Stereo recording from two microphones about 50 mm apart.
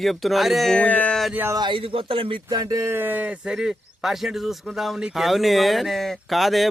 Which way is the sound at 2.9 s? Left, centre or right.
Right.